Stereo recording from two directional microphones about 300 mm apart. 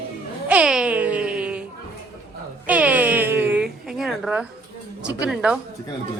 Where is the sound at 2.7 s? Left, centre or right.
Centre.